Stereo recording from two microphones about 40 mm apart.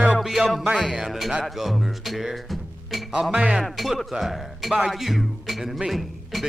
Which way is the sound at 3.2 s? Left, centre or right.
Right.